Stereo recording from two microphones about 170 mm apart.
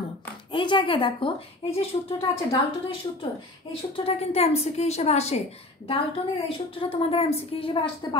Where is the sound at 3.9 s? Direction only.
35° left (ahead or behind).